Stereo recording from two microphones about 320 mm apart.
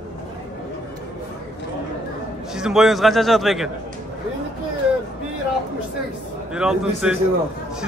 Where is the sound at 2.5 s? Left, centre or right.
Centre.